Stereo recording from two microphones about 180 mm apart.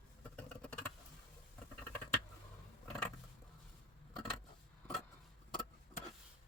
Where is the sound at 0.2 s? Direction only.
10° left (ahead or behind).